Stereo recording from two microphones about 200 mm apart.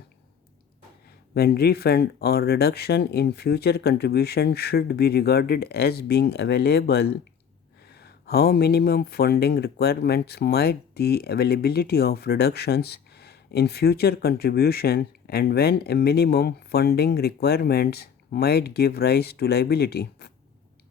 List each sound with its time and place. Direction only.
1.3 s speech: 50° left (ahead or behind)